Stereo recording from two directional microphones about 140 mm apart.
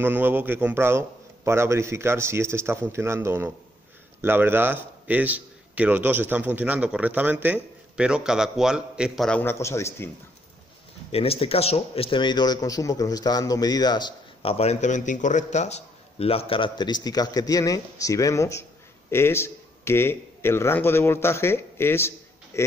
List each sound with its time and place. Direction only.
0.0 s a man's voice: 15° right (ahead or behind)
9.4 s speech: 20° left (ahead or behind)
11.1 s speech: 45° left (ahead or behind); by 22.7 s 20° left (ahead or behind)